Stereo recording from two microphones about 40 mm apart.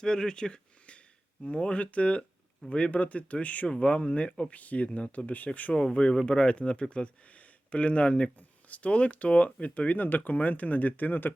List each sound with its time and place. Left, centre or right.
0.0 s speech: centre
4.5 s speech: left
5.7 s speech: centre; by 11.3 s left